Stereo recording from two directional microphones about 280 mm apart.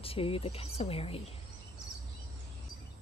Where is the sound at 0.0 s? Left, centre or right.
Centre.